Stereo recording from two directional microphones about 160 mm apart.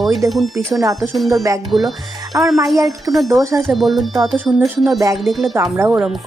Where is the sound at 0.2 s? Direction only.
20° right (ahead or behind).